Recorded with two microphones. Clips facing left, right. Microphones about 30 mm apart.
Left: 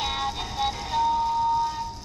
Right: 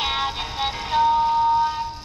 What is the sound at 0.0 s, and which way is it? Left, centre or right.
Music, right.